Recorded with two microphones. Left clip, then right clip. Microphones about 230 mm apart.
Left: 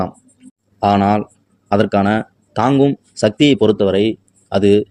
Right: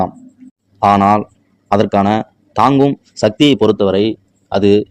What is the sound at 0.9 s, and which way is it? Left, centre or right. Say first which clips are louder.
A man's voice: right 4 dB; centre.